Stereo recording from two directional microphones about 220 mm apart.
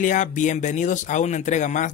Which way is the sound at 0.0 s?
35° left (ahead or behind).